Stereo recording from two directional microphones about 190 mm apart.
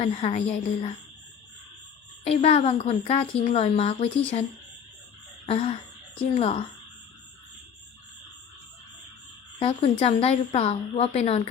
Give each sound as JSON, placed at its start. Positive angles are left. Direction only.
{"t": 0.0, "sound": "speech", "side_deg": 35}
{"t": 2.2, "sound": "speech", "side_deg": 35}
{"t": 5.5, "sound": "a sound", "side_deg": 30}
{"t": 6.3, "sound": "speech", "side_deg": 35}
{"t": 9.6, "sound": "speech", "side_deg": 30}